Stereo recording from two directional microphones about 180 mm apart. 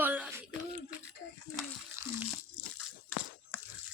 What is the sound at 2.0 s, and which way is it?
Water, 15° right (ahead or behind).